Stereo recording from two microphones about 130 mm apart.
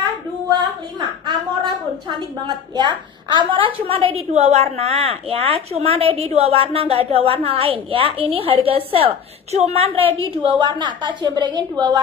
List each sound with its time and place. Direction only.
0.5 s a woman's voice: 35° right (ahead or behind)
10.2 s a woman's voice: 40° right (ahead or behind)